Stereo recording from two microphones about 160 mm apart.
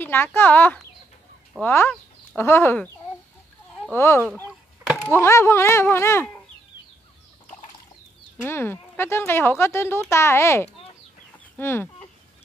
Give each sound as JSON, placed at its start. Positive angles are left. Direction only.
{"t": 0.0, "sound": "speech", "side_deg": 15}
{"t": 3.9, "sound": "speech", "side_deg": 15}
{"t": 8.5, "sound": "speech", "side_deg": 15}
{"t": 11.5, "sound": "chicken", "side_deg": 15}